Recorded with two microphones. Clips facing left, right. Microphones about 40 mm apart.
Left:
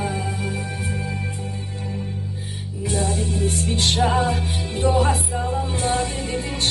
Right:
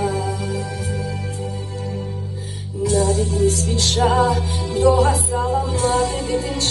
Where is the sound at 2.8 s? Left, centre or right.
Left.